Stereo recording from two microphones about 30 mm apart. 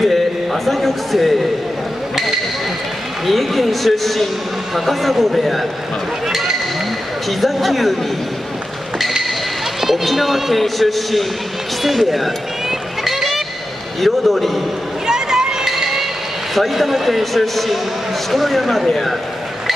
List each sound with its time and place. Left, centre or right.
0.1 s a man's voice: centre
3.3 s a man's voice: centre
6.2 s a sound: centre
7.2 s a man's voice: centre
9.8 s a man's voice: centre
13.0 s music: centre
14.0 s a man's voice: centre
15.0 s a sound: right
16.5 s a man's voice: centre